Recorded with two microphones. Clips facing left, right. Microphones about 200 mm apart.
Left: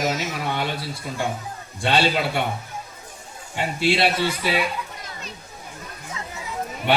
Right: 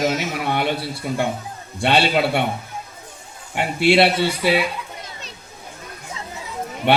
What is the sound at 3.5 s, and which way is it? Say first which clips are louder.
Speech: right 6 dB; 65° right (ahead or behind).